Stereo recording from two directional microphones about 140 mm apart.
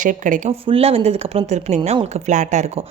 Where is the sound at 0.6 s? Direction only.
45° right (ahead or behind); by 2.6 s 60° right (ahead or behind).